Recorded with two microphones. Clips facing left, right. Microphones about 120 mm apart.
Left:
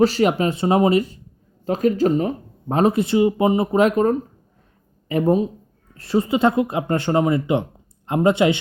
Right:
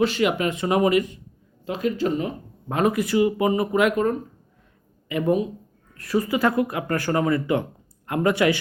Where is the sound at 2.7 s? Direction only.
30° left (ahead or behind).